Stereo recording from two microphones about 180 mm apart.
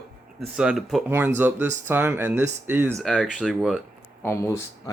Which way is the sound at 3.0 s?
Centre (ahead or behind).